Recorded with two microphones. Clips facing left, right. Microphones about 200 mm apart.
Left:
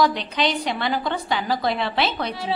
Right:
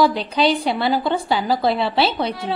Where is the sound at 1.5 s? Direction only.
5° right (ahead or behind).